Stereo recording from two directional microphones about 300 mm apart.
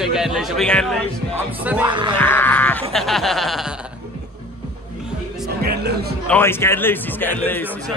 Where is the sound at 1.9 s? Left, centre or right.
Centre.